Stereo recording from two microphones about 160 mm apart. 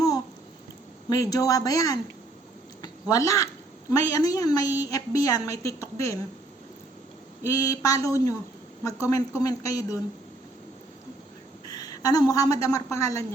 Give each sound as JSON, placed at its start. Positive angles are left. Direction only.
{"t": 1.1, "sound": "a woman's voice", "side_deg": 20}
{"t": 7.4, "sound": "a woman's voice", "side_deg": 20}
{"t": 11.7, "sound": "a sound", "side_deg": 25}
{"t": 12.3, "sound": "a woman's voice", "side_deg": 20}